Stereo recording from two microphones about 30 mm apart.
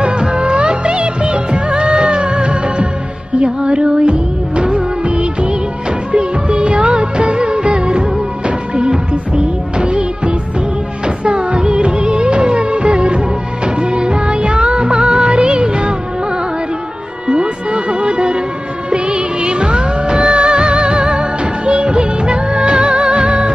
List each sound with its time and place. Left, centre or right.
0.3 s music of bollywood: right
3.3 s music: right
4.1 s music of bollywood: right
6.1 s music: right
11.2 s music of bollywood: right
13.7 s music: right
17.3 s a sound: right
18.9 s music: right